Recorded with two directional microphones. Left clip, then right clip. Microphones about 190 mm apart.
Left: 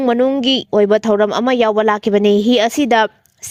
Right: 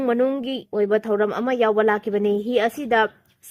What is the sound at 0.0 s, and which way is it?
Speech, 40° left (ahead or behind).